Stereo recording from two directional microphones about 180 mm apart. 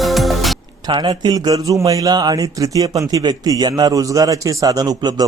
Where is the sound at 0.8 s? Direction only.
25° right (ahead or behind).